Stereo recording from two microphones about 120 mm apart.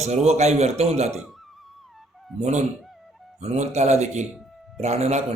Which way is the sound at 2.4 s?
70° right (ahead or behind).